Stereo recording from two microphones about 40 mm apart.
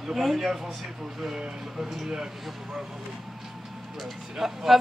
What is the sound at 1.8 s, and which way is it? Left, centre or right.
Speech, centre.